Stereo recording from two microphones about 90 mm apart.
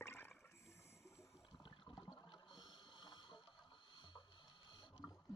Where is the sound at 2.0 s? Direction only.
55° left (ahead or behind).